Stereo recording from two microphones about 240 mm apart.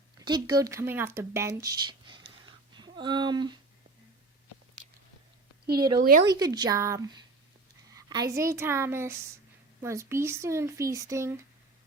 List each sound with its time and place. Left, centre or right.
0.2 s speech: centre
5.7 s speech: centre
6.0 s speech: right
6.2 s speech: centre